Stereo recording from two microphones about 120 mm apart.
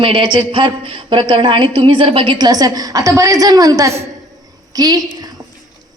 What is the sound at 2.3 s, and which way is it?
A woman's voice, 35° right (ahead or behind).